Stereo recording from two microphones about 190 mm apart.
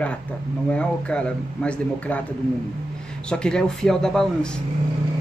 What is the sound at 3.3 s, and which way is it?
Speech, 5° left (ahead or behind).